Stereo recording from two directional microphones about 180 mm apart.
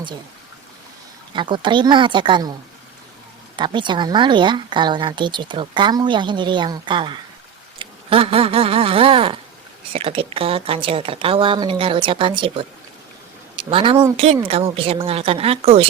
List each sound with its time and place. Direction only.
1.3 s speech: 25° right (ahead or behind)